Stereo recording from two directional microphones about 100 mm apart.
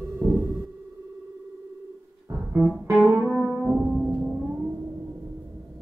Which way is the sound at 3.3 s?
5° right (ahead or behind).